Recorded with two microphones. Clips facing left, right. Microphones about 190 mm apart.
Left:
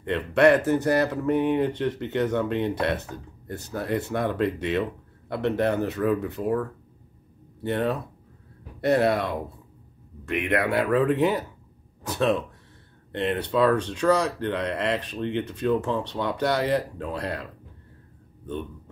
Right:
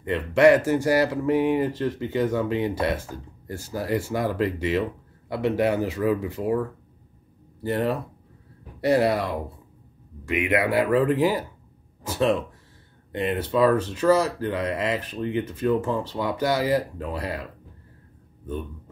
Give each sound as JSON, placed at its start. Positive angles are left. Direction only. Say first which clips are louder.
{"t": 0.0, "sound": "speech", "louder": "right 2 dB", "side_deg": -5}